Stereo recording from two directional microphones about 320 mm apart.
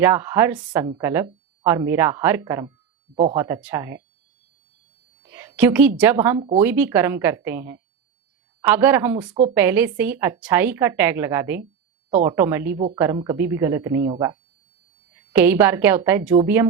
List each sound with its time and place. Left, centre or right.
0.0 s a woman's voice: centre
5.2 s a sound: centre
6.0 s a woman's voice: centre